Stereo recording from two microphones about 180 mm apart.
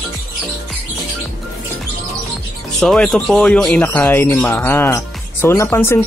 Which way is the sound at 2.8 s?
Centre (ahead or behind).